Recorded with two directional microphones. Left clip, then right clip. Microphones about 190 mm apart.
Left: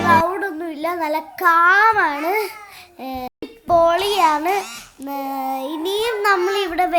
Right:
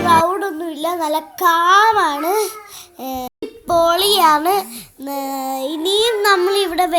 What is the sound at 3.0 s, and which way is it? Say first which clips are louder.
Music: right 3 dB; 25° right (ahead or behind).